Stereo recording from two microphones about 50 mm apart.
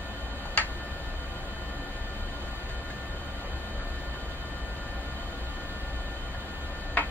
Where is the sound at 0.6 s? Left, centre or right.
Left.